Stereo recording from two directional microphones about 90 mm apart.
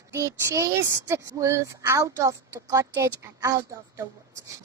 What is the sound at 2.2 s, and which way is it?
Speech, 40° right (ahead or behind).